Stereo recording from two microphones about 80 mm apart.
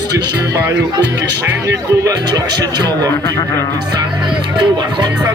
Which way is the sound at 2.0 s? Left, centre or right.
Right.